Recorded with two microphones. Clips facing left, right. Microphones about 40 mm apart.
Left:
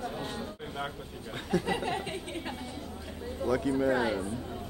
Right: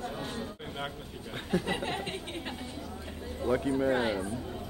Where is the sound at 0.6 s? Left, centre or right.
Centre.